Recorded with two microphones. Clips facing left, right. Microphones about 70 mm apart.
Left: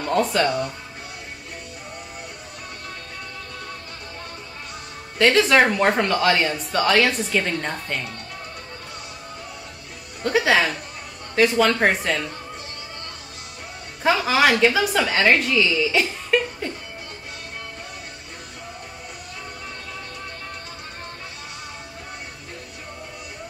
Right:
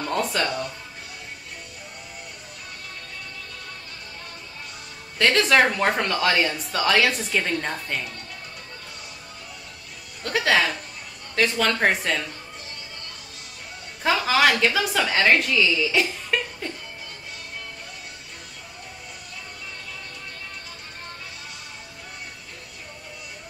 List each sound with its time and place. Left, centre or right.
0.0 s speech: centre
5.2 s speech: centre
10.2 s speech: centre
14.0 s speech: centre